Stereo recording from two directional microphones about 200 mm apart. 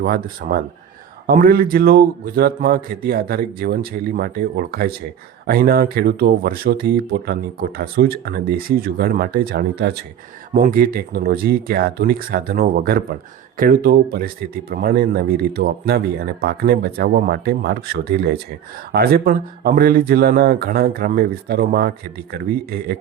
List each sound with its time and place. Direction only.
0.0 s speech: 45° right (ahead or behind)